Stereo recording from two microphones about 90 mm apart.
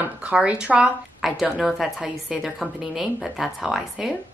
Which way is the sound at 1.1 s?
5° right (ahead or behind).